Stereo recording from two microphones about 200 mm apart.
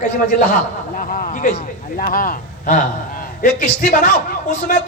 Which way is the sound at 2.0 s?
45° left (ahead or behind).